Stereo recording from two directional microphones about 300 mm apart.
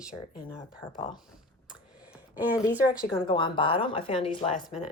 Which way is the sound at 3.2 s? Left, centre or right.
Centre.